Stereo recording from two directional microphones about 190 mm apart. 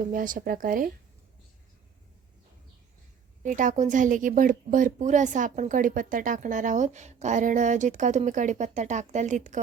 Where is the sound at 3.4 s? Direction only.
45° right (ahead or behind).